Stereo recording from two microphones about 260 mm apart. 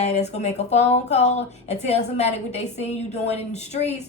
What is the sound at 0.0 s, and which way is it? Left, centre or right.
Speech, left.